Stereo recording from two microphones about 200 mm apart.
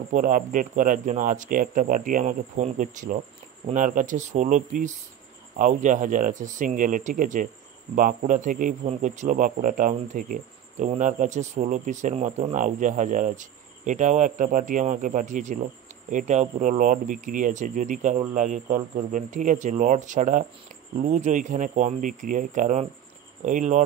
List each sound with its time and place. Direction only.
0.1 s a man's voice: 40° right (ahead or behind)